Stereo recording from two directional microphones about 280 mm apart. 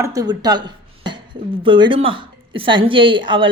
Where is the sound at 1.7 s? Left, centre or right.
Centre.